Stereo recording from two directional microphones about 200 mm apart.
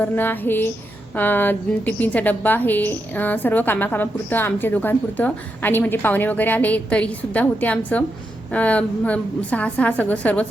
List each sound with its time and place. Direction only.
0.0 s a woman's voice: 10° left (ahead or behind)